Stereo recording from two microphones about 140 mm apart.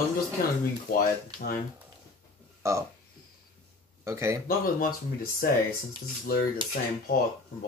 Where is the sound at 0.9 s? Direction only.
90° left.